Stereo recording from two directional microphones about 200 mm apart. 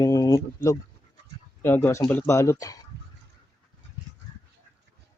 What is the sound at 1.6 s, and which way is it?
Speech, 10° left (ahead or behind).